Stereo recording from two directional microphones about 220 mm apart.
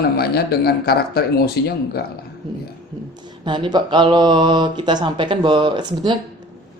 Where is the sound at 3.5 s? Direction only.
20° right (ahead or behind).